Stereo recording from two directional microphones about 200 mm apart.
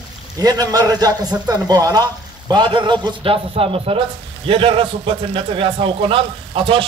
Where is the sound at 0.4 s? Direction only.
20° right (ahead or behind).